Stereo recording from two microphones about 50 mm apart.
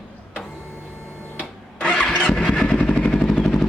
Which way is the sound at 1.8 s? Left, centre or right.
Left.